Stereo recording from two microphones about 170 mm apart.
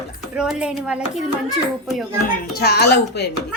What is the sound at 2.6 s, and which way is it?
Speech, 75° left (ahead or behind).